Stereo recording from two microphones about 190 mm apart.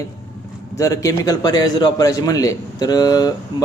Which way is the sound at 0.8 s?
15° left (ahead or behind).